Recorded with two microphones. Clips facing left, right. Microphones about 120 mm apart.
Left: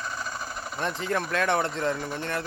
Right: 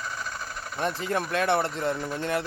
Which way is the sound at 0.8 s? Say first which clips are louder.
Right 1 dB; 5° right (ahead or behind).